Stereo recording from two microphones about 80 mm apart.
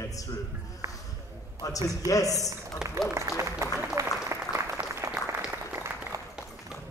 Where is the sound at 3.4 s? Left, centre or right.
Right.